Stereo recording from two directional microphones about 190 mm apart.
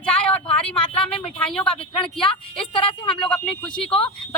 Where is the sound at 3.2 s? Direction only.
5° left (ahead or behind).